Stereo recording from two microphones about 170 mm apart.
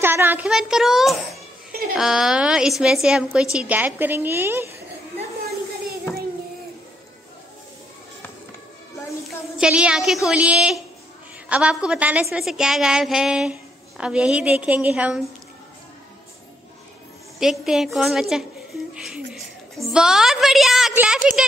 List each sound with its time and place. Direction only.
0.0 s a woman's voice: 10° right (ahead or behind)
1.7 s a sound: 60° right (ahead or behind)
2.0 s a woman's voice: 5° right (ahead or behind)
9.6 s a woman's voice: 5° right (ahead or behind)
17.4 s a woman's voice: centre (ahead or behind)